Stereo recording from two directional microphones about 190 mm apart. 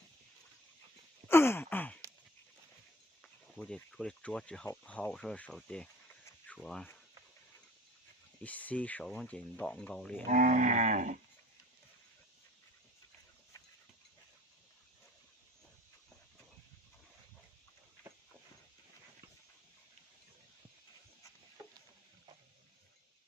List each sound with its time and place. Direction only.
1.3 s sigh: 10° left (ahead or behind)
3.2 s speech: 5° left (ahead or behind)
8.4 s speech: 10° left (ahead or behind)
10.2 s livestock: 40° right (ahead or behind)